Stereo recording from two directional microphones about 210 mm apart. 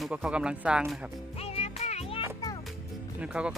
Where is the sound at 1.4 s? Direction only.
30° left (ahead or behind).